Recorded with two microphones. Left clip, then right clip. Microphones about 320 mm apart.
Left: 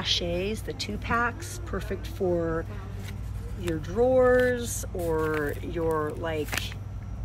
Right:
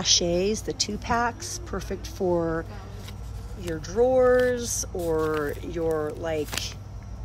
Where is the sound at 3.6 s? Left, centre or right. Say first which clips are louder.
Right 2 dB; centre.